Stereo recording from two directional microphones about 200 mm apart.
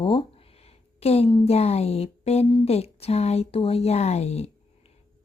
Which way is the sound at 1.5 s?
30° left (ahead or behind).